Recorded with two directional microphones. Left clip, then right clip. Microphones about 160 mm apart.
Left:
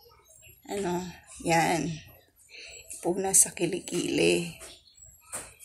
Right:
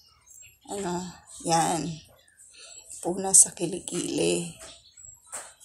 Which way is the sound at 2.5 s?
65° right (ahead or behind).